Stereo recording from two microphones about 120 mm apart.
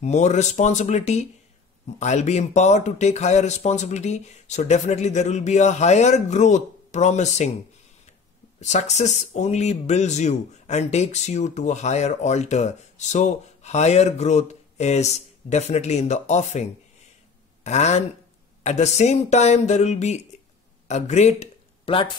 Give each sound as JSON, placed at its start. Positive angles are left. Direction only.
{"t": 0.0, "sound": "speech", "side_deg": 70}
{"t": 8.5, "sound": "speech", "side_deg": 70}
{"t": 17.6, "sound": "speech", "side_deg": 70}